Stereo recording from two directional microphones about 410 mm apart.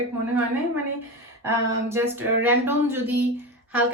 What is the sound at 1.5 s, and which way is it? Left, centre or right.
Speech, centre.